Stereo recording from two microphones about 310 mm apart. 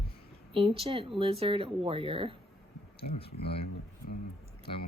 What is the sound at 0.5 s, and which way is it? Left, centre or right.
A woman's voice, centre.